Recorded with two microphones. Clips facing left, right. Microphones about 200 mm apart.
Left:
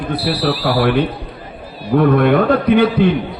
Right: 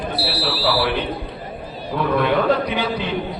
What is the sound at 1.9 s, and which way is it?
A man's voice, 55° left (ahead or behind).